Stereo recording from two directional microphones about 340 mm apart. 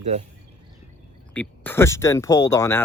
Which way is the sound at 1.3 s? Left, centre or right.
Centre.